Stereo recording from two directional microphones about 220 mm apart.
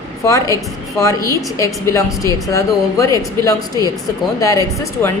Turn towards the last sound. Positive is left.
turn(degrees=15)  # may be behind; listen again after turning